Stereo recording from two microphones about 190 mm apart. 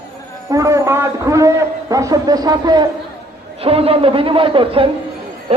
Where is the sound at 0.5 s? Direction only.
15° right (ahead or behind).